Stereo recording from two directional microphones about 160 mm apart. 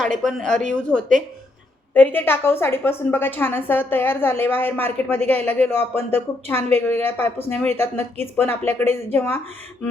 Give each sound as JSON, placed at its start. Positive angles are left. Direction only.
{"t": 0.2, "sound": "a woman's voice", "side_deg": 0}